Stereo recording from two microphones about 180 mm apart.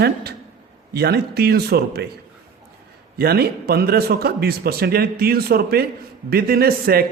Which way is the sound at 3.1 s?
60° right (ahead or behind).